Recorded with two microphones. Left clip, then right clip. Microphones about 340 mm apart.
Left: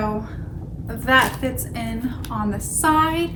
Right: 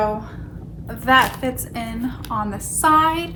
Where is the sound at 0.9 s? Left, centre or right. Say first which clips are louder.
Right 2 dB; centre.